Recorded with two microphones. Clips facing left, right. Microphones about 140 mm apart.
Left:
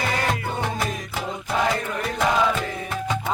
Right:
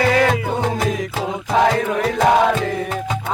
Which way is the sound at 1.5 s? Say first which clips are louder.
Right 8 dB; 80° right.